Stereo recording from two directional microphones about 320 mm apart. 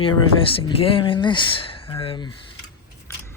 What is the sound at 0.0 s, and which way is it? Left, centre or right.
Speech, centre.